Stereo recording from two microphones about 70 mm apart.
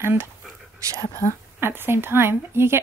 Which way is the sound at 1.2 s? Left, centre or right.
Left.